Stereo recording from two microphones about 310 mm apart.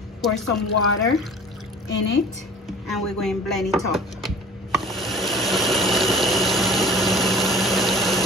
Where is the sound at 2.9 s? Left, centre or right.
Centre.